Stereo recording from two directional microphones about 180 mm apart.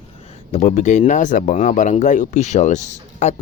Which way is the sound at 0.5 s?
40° left (ahead or behind).